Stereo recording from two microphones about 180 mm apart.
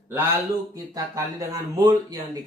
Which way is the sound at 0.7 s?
20° right (ahead or behind).